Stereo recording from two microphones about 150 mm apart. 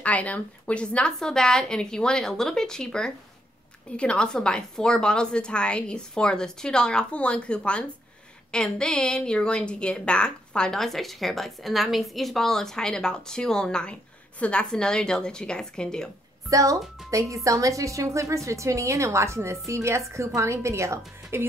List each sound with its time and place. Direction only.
0.0 s a woman's voice: 10° left (ahead or behind)
16.4 s a woman's voice: 20° right (ahead or behind)